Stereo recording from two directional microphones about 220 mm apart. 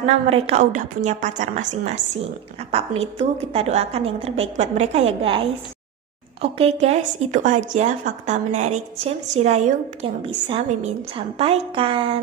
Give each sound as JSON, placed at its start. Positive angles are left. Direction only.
{"t": 0.0, "sound": "a woman's voice", "side_deg": -25}
{"t": 6.4, "sound": "speech", "side_deg": -25}